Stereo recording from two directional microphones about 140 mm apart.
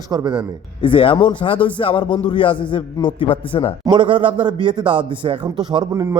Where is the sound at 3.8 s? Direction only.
35° right (ahead or behind).